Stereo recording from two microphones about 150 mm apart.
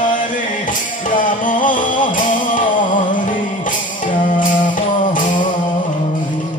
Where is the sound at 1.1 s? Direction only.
65° left (ahead or behind).